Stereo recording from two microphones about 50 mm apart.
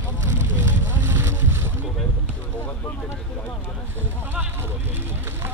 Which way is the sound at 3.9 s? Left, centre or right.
Right.